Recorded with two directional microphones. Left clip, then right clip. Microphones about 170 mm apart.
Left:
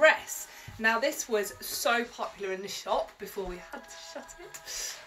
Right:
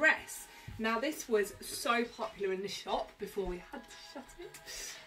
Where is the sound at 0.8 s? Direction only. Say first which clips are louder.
Left 7 dB; 30° right (ahead or behind).